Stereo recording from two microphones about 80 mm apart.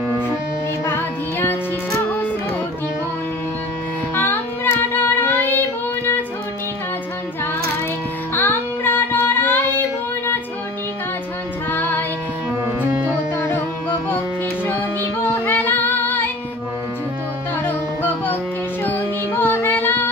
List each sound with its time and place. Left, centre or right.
0.8 s music: left
4.1 s child singing: left
8.4 s music: left
11.7 s music: left
15.4 s female singing: left
17.6 s music: left